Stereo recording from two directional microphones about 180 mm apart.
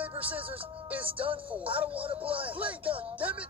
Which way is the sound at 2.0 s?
30° right (ahead or behind).